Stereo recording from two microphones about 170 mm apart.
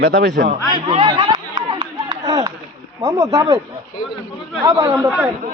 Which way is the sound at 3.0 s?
20° right (ahead or behind).